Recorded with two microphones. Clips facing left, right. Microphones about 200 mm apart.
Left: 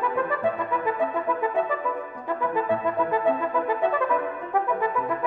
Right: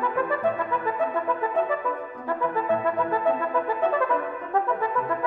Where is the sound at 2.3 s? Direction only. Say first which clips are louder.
Even; 15° left (ahead or behind).